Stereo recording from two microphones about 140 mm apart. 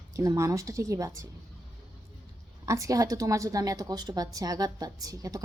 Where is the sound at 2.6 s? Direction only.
20° right (ahead or behind).